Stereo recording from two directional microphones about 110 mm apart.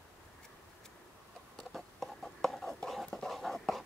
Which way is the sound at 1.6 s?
Centre (ahead or behind).